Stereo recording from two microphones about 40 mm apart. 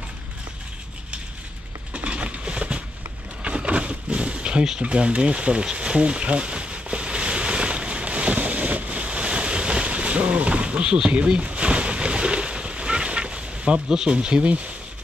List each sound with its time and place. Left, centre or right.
2.0 s a sound: right
3.4 s power windows: right
4.7 s bee: right
13.8 s speech: right